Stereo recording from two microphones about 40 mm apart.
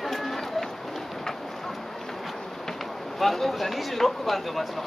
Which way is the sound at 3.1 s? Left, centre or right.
Centre.